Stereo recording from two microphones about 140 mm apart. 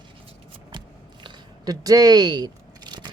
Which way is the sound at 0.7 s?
35° right (ahead or behind).